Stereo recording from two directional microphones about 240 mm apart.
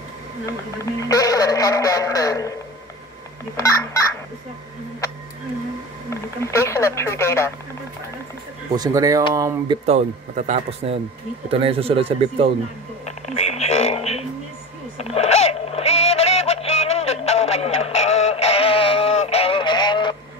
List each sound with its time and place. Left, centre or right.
1.0 s speech: centre
6.4 s speech: centre
8.7 s speech: centre
9.8 s speech: right
13.0 s a sound: left